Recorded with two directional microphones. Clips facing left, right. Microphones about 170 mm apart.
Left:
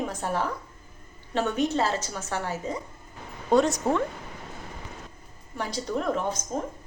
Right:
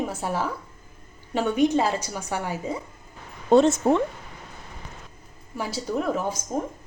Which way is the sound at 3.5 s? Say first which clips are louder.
Right 4 dB; 25° right (ahead or behind).